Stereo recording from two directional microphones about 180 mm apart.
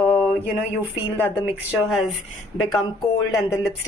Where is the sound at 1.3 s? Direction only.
5° right (ahead or behind).